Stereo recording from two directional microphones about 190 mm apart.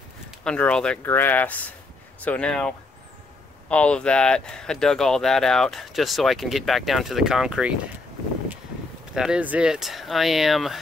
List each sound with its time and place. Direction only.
0.4 s speech: 5° left (ahead or behind)
9.1 s speech: 5° right (ahead or behind)